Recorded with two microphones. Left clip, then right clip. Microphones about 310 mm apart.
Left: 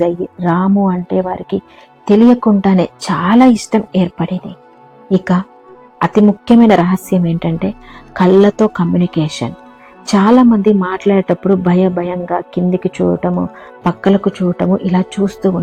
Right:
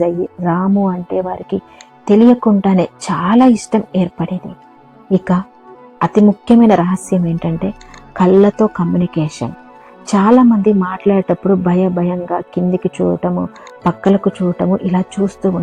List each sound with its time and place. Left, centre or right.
0.0 s a woman's voice: right